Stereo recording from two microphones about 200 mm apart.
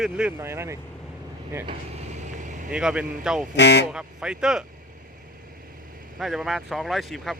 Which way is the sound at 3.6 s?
60° left (ahead or behind).